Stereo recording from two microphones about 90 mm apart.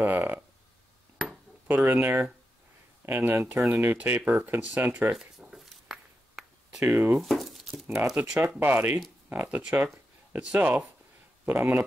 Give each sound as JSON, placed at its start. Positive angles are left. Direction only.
{"t": 0.0, "sound": "speech", "side_deg": -25}
{"t": 1.2, "sound": "ping", "side_deg": 0}
{"t": 1.9, "sound": "speech", "side_deg": -25}
{"t": 5.1, "sound": "a sound", "side_deg": -5}
{"t": 6.8, "sound": "speech", "side_deg": -25}
{"t": 7.2, "sound": "a sound", "side_deg": 0}
{"t": 8.2, "sound": "speech", "side_deg": -15}